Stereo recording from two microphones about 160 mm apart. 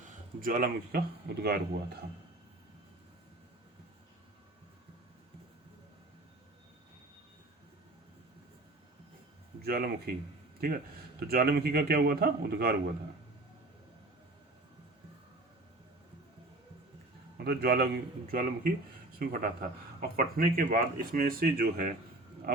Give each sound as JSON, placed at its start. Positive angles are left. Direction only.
{"t": 0.0, "sound": "speech", "side_deg": -55}
{"t": 9.6, "sound": "speech", "side_deg": -75}
{"t": 11.2, "sound": "a man's voice", "side_deg": -75}
{"t": 17.3, "sound": "a man's voice", "side_deg": -80}